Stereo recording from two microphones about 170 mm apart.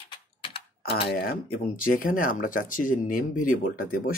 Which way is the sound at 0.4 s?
35° left (ahead or behind).